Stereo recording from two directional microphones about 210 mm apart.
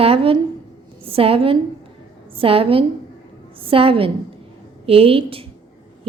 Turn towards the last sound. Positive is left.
turn(degrees=-25)  # may be behind; listen again after turning